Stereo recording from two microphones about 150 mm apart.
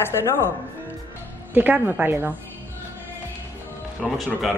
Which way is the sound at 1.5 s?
10° right (ahead or behind).